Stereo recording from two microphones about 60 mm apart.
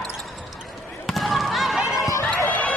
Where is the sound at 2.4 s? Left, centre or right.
Left.